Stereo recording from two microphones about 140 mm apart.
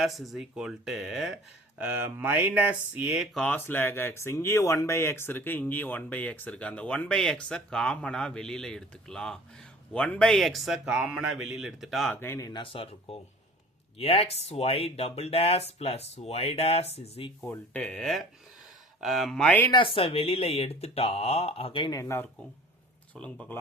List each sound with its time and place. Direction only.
0.0 s speech: centre (ahead or behind)
3.3 s speech: 10° left (ahead or behind)
12.1 s speech: 15° left (ahead or behind)
12.7 s speech: 40° left (ahead or behind)
17.5 s speech: 10° left (ahead or behind)
19.7 s speech: 40° left (ahead or behind)
21.9 s speech: 20° left (ahead or behind)
23.1 s speech: 10° left (ahead or behind)